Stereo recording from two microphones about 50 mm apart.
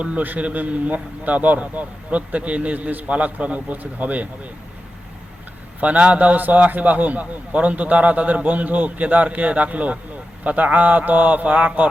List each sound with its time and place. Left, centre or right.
0.2 s a man's voice: right
5.8 s a man's voice: right